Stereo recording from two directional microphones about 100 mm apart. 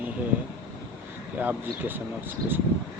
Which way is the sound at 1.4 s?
20° right (ahead or behind).